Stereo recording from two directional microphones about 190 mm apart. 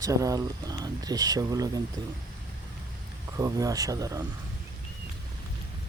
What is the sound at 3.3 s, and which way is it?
Speech, 20° right (ahead or behind).